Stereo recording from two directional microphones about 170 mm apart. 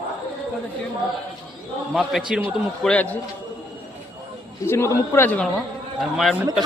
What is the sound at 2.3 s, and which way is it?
Speech, 10° right (ahead or behind).